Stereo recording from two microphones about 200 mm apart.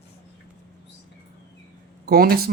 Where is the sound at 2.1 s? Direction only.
50° right (ahead or behind).